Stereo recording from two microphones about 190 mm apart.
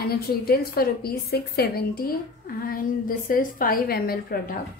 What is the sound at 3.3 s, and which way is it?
A woman's voice, 50° left (ahead or behind).